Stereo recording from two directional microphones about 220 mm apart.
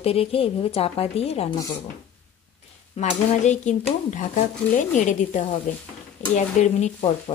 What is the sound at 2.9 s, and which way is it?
Speech, 30° left (ahead or behind).